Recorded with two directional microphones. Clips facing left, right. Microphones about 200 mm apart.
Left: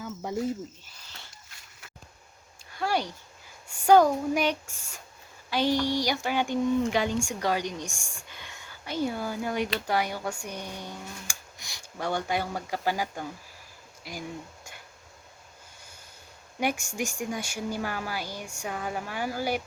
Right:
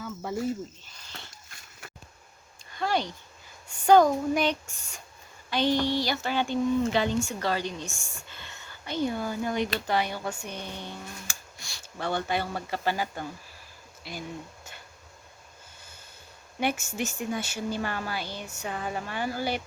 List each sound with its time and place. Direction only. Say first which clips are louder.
0.0 s cricket: even; 15° left (ahead or behind)
2.7 s a sound: even; 10° left (ahead or behind)
3.7 s speech: even; 10° left (ahead or behind)
16.6 s speech: even; 10° left (ahead or behind)